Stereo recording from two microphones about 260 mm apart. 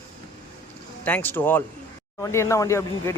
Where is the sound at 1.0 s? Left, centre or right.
Centre.